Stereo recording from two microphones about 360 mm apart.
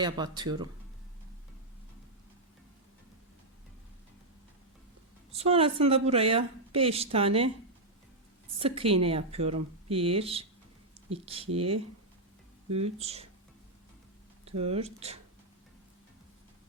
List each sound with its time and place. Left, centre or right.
0.0 s a woman's voice: centre
5.3 s a woman's voice: centre
8.5 s a woman's voice: centre
12.7 s a woman's voice: centre
14.4 s a woman's voice: centre